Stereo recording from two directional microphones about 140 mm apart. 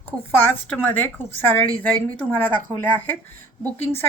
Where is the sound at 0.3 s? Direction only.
10° left (ahead or behind).